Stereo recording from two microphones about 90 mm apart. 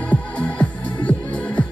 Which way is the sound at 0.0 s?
15° left (ahead or behind).